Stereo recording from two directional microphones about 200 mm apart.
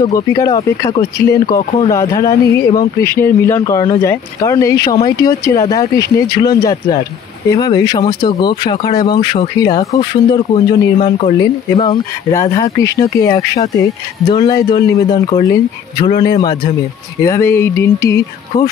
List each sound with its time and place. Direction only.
0.0 s speech: 15° left (ahead or behind)
11.0 s speech: 35° left (ahead or behind); by 18.7 s 15° left (ahead or behind)